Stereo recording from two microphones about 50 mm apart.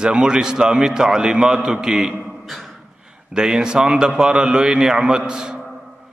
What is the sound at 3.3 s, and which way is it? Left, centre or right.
A man's voice, centre.